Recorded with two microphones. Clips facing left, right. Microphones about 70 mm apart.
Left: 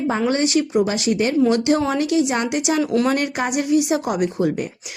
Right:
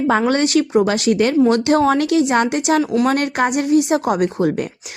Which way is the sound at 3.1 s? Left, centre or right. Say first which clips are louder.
Right 3 dB; right.